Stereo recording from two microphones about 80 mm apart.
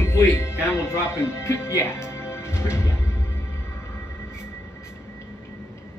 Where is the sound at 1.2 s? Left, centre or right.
Left.